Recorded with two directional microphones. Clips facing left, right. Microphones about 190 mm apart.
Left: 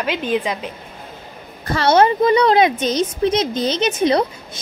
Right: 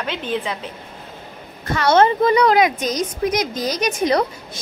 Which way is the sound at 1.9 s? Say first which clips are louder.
Left 1 dB; 20° left (ahead or behind).